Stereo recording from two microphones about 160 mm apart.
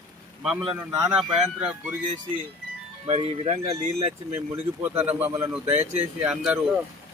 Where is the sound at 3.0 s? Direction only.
40° right (ahead or behind).